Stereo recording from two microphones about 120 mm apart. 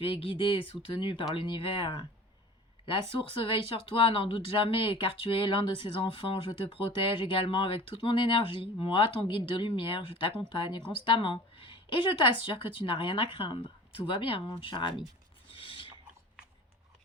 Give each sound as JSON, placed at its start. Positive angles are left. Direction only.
{"t": 0.0, "sound": "speech", "side_deg": 50}
{"t": 15.5, "sound": "pulleys", "side_deg": 45}